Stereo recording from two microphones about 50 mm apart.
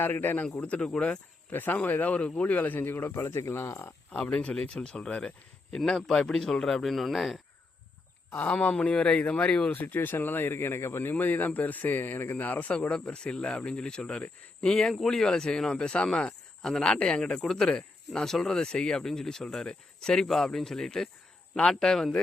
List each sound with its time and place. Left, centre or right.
0.0 s speech: left
0.5 s speech: left
1.5 s speech: left
4.1 s speech: left
5.7 s speech: centre
8.4 s speech: left
8.7 s speech: left
9.7 s speech: left
11.1 s speech: left
12.9 s speech: left